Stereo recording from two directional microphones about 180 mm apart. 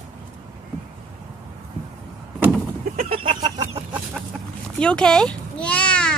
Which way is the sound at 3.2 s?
25° right (ahead or behind).